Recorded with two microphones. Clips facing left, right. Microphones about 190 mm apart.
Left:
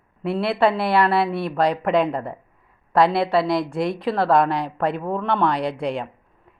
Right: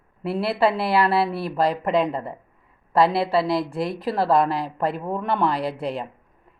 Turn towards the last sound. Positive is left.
turn(degrees=-5)  # may be behind; listen again after turning